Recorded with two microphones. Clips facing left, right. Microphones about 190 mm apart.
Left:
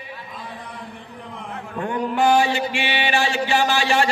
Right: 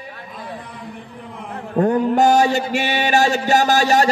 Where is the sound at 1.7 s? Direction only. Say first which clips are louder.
Right 8 dB; 40° right (ahead or behind).